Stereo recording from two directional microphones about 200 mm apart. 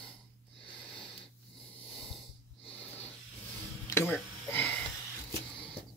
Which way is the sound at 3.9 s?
10° left (ahead or behind).